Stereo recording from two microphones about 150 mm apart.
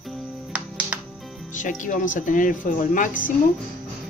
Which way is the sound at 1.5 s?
60° left (ahead or behind).